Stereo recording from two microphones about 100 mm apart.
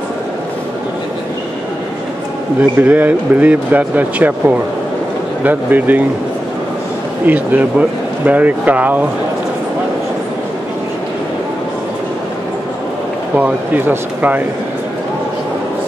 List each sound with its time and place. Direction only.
2.8 s speech: 15° right (ahead or behind)
7.2 s speech: 15° right (ahead or behind)
13.4 s speech: 15° right (ahead or behind)